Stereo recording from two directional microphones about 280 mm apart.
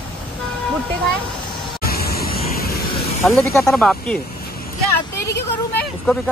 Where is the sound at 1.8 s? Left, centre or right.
Left.